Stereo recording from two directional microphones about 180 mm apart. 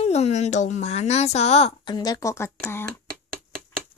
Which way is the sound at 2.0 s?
20° left (ahead or behind).